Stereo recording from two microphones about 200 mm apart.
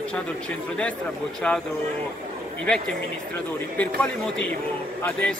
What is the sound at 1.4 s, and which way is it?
Speech, 5° left (ahead or behind).